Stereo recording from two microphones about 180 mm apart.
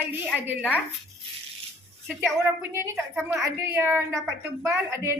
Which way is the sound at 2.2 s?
15° right (ahead or behind).